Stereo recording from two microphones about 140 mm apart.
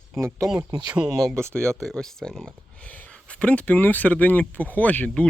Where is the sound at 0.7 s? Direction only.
30° right (ahead or behind).